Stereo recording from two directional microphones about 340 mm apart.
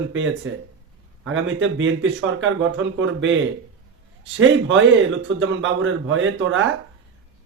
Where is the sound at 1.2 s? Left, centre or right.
Right.